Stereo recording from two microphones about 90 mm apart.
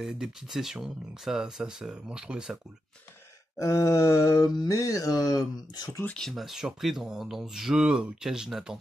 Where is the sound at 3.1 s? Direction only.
35° left (ahead or behind).